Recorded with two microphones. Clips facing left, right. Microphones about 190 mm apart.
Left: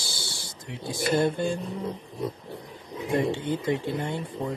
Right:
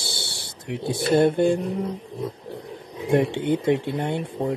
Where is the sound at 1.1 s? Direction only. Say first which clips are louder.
Right 7 dB; 60° right (ahead or behind).